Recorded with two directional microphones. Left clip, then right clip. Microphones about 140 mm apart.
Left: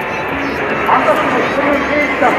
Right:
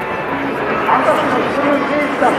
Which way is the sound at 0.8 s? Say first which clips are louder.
Left 2 dB; 15° left (ahead or behind).